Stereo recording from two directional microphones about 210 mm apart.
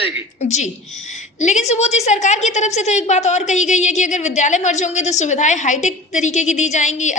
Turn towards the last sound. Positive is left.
turn(degrees=35)  # may be behind; listen again after turning